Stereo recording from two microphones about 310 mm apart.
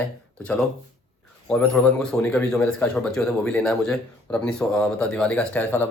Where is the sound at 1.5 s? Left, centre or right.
Centre.